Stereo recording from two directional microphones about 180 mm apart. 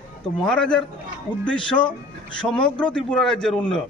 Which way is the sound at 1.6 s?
25° left (ahead or behind).